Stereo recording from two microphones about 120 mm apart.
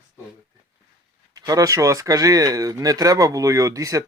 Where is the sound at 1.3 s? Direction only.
30° right (ahead or behind).